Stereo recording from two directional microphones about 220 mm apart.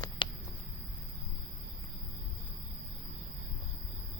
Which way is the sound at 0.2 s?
20° left (ahead or behind).